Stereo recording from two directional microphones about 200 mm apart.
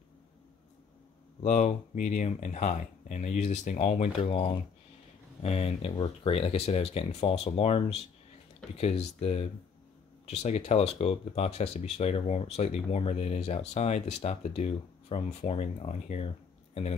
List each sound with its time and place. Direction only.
1.4 s speech: 35° left (ahead or behind)